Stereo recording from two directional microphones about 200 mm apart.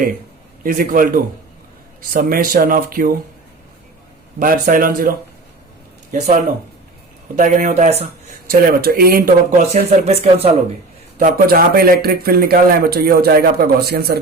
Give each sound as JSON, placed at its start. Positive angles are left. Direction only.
{"t": 0.6, "sound": "speech", "side_deg": -45}
{"t": 4.4, "sound": "speech", "side_deg": -45}
{"t": 7.3, "sound": "speech", "side_deg": -40}
{"t": 8.4, "sound": "speech", "side_deg": -50}
{"t": 9.7, "sound": "speech", "side_deg": -30}
{"t": 11.2, "sound": "speech", "side_deg": -45}